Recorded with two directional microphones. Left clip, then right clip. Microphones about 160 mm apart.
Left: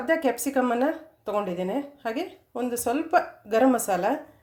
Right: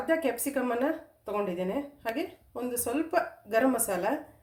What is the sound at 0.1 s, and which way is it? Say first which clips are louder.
Speech: left 5 dB; 45° left (ahead or behind).